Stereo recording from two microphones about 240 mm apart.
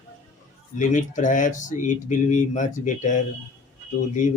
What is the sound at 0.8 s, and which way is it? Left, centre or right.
Speech, left.